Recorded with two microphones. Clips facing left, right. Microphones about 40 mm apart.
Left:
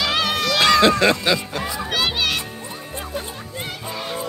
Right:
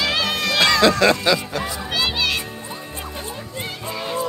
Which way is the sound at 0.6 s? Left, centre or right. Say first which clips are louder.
Left 1 dB; left.